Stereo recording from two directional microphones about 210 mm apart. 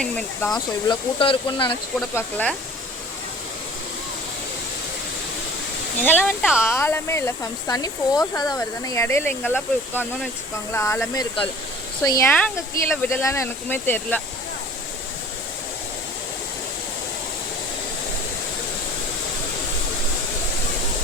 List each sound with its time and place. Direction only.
0.0 s speech: 5° left (ahead or behind)
0.9 s speech: 20° left (ahead or behind)
2.0 s speech: 5° left (ahead or behind)
6.2 s speech: 5° right (ahead or behind)
6.7 s speech: 15° left (ahead or behind)